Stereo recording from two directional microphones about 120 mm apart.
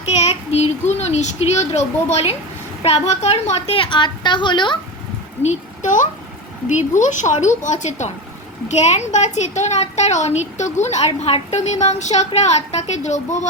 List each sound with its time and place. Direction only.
0.2 s a child's voice: 60° left (ahead or behind); by 4.8 s 40° left (ahead or behind)
5.4 s a woman's voice: 80° left
8.7 s a woman's voice: 70° left (ahead or behind)